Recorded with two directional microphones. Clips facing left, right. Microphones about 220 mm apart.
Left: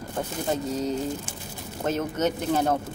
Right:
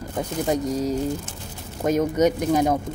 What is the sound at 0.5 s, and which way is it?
Speech, 10° right (ahead or behind).